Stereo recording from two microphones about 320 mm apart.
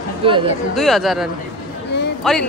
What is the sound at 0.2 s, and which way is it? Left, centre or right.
Speech, centre.